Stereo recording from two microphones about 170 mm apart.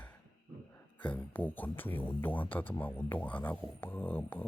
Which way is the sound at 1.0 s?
10° left (ahead or behind).